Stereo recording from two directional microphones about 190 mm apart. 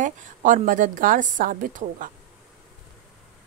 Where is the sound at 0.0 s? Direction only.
40° right (ahead or behind).